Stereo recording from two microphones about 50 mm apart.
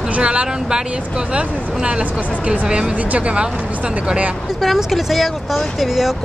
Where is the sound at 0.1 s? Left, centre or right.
Right.